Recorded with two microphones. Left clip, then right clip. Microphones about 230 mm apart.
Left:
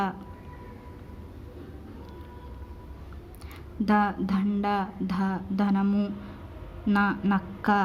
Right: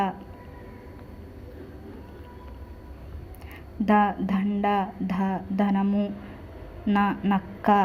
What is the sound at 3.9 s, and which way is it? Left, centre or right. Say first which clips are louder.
A woman's voice: right 3 dB; centre.